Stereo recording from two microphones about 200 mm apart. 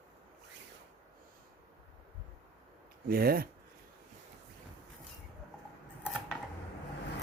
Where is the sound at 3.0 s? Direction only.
50° right (ahead or behind).